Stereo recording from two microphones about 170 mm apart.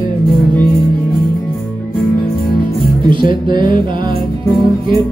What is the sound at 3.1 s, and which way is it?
Music, 30° right (ahead or behind).